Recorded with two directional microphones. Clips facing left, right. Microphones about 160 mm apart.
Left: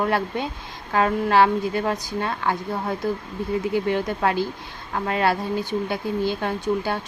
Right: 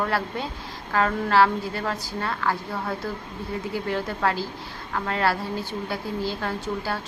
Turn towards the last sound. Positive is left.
turn(degrees=20)  # may be behind; listen again after turning